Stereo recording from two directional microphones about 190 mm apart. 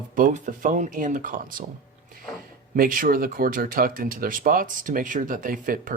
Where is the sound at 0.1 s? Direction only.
45° right (ahead or behind).